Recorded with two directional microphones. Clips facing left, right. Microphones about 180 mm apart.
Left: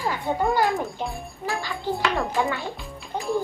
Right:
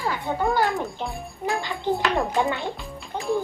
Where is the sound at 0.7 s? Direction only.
Centre (ahead or behind).